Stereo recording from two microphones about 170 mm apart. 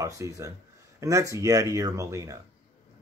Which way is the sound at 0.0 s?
20° right (ahead or behind).